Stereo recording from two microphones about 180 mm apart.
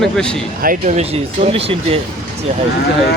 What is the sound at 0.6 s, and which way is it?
Speech, 45° right (ahead or behind).